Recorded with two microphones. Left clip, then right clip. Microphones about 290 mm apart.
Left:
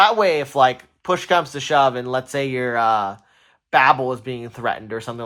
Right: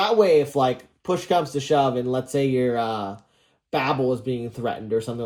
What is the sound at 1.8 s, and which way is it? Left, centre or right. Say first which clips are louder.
Speech: left 8 dB; centre.